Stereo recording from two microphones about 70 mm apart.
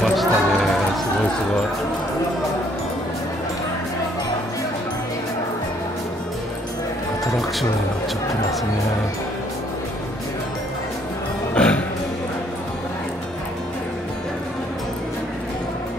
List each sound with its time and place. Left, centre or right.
0.0 s music: centre
11.5 s music: centre